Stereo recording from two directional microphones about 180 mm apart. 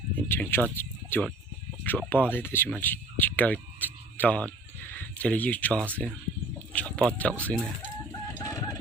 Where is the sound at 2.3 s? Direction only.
10° left (ahead or behind).